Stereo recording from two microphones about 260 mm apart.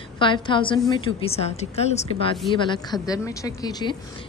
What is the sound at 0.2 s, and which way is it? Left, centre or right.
A woman's voice, centre.